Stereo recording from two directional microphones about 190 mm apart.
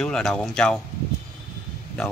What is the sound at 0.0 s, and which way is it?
Speech, 5° left (ahead or behind).